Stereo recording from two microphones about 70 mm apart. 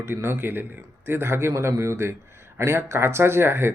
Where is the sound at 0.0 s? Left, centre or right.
Right.